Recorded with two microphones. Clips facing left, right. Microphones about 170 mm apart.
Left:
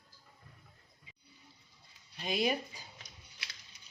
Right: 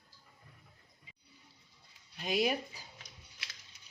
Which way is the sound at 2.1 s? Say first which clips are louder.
Right 1 dB; 10° right (ahead or behind).